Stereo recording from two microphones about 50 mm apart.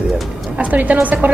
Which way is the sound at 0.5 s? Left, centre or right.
Right.